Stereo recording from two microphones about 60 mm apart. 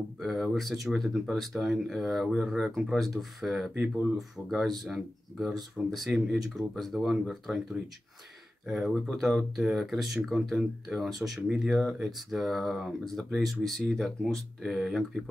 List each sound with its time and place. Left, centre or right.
0.2 s speech: centre
3.7 s speech: right
4.2 s speech: centre
8.6 s speech: centre